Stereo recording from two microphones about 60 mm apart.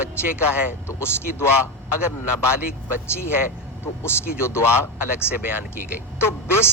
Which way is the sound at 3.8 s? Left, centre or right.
Left.